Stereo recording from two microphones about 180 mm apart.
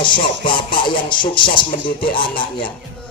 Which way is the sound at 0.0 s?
25° left (ahead or behind).